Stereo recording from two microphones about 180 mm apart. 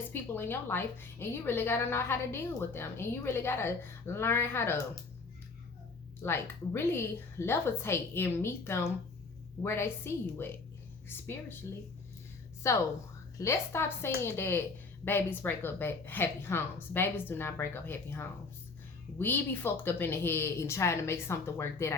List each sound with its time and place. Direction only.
0.1 s a woman's voice: 10° left (ahead or behind)
6.2 s a woman's voice: 15° left (ahead or behind)
12.7 s a woman's voice: 15° left (ahead or behind)